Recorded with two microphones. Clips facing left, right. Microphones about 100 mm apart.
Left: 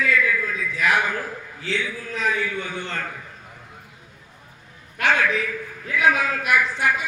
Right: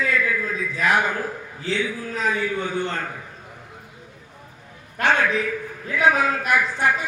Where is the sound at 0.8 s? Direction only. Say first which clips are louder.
Right 1 dB; 30° right (ahead or behind).